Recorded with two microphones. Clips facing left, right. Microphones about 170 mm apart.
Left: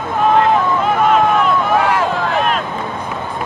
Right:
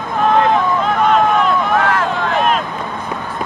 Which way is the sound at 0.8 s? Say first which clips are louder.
Left 1 dB; centre (ahead or behind).